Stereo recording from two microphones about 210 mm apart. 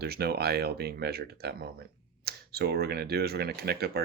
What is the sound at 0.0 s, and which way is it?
Speech, 50° right (ahead or behind).